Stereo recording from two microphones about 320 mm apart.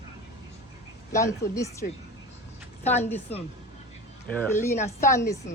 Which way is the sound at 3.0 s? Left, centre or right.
Centre.